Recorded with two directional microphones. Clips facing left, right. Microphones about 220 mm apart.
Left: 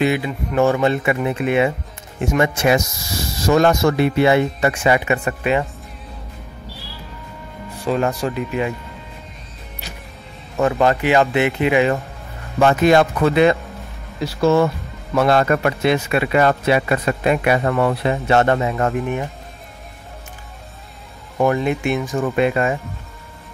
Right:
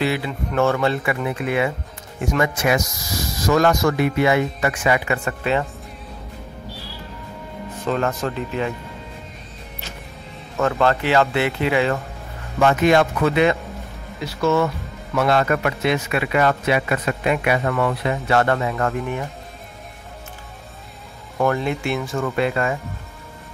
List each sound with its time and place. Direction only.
0.0 s speech: 15° left (ahead or behind)
7.8 s speech: 10° left (ahead or behind)
10.6 s speech: 15° left (ahead or behind)
12.5 s speech: 35° left (ahead or behind)
21.4 s speech: 15° left (ahead or behind)